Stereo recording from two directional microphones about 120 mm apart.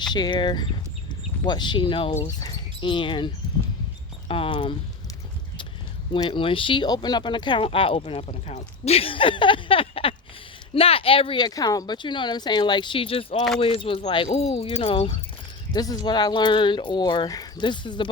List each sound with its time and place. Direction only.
0.1 s speech: 40° left (ahead or behind)
6.2 s speech: 45° left (ahead or behind)
8.4 s speech: 70° left (ahead or behind); by 11.4 s 50° left (ahead or behind)
11.4 s speech: 30° left (ahead or behind)
14.3 s speech: 55° left (ahead or behind)
15.7 s speech: 35° left (ahead or behind)